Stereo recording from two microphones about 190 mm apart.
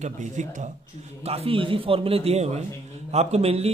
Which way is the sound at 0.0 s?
40° right (ahead or behind).